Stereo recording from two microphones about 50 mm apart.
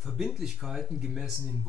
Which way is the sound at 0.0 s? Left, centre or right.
Centre.